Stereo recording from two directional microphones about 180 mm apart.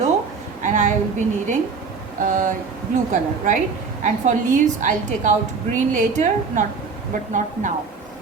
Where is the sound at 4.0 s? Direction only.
45° right (ahead or behind).